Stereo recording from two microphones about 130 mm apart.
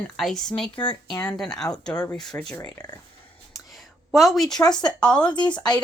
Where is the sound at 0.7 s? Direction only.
40° left (ahead or behind).